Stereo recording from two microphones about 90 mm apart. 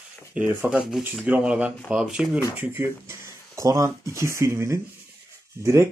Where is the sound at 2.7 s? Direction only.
30° right (ahead or behind).